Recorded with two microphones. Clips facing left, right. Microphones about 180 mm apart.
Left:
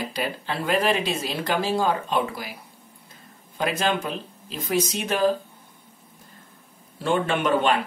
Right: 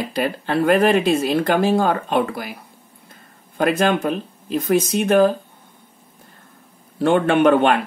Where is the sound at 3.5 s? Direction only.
55° right (ahead or behind).